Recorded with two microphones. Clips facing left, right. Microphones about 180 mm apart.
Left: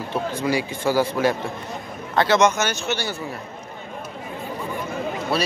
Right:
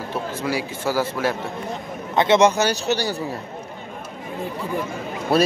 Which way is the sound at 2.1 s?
25° right (ahead or behind).